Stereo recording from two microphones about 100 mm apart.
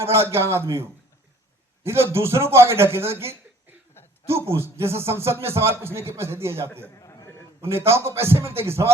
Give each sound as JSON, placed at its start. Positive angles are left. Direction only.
{"t": 0.0, "sound": "a man's voice", "side_deg": -25}
{"t": 6.9, "sound": "a sound", "side_deg": 30}
{"t": 7.6, "sound": "a man's voice", "side_deg": -25}